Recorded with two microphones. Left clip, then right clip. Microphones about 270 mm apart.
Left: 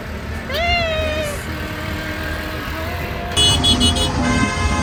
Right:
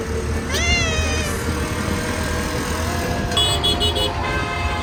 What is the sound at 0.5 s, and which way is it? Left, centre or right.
Cat, centre.